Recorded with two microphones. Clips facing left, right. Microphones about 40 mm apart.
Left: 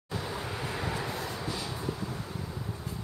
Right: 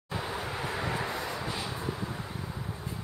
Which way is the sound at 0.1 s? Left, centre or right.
Centre.